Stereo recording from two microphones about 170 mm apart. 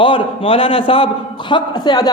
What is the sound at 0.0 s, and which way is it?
A man's voice, 30° left (ahead or behind).